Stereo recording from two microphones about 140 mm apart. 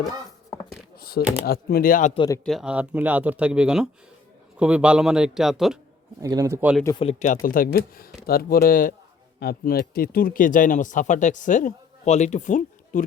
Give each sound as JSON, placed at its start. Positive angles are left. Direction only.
{"t": 0.9, "sound": "a sound", "side_deg": 90}
{"t": 1.5, "sound": "speech", "side_deg": 90}
{"t": 2.4, "sound": "a man's voice", "side_deg": 0}
{"t": 6.2, "sound": "a man's voice", "side_deg": -25}
{"t": 7.0, "sound": "speech", "side_deg": 55}
{"t": 7.4, "sound": "speech", "side_deg": 90}